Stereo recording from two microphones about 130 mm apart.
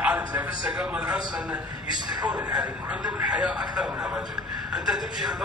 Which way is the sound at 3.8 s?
5° right (ahead or behind).